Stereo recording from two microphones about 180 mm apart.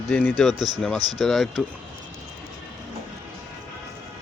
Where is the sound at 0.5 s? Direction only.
25° right (ahead or behind).